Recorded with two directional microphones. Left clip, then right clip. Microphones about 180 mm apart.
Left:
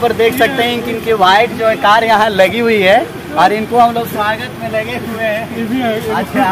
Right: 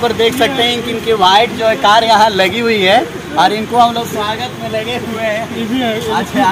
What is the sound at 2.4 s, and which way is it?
Speech, 55° left (ahead or behind).